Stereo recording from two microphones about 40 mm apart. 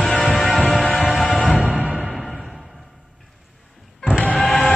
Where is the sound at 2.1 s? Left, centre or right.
Centre.